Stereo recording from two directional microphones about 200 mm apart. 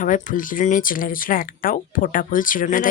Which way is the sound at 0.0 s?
40° left (ahead or behind).